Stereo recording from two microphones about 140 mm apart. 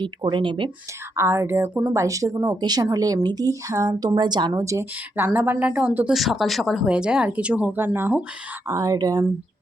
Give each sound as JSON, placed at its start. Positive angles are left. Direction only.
{"t": 0.0, "sound": "speech", "side_deg": -35}
{"t": 1.1, "sound": "speech", "side_deg": -20}
{"t": 6.1, "sound": "speech", "side_deg": 0}